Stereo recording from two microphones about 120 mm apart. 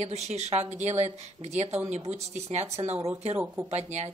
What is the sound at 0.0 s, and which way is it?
A woman's voice, 70° right (ahead or behind).